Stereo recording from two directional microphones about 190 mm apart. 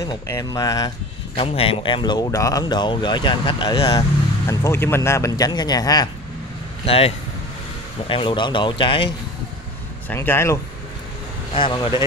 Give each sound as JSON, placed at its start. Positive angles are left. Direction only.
{"t": 0.0, "sound": "speech", "side_deg": 20}
{"t": 6.9, "sound": "speech", "side_deg": 30}
{"t": 10.0, "sound": "speech", "side_deg": 10}
{"t": 11.5, "sound": "speech", "side_deg": 25}